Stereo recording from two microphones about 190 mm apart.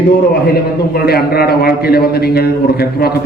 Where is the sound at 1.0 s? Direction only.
55° left (ahead or behind).